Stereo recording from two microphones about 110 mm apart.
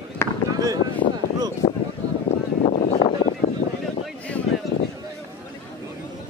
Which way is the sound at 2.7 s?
85° left.